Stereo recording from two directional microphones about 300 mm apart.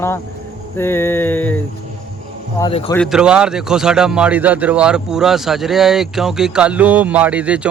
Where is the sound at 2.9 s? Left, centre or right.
Centre.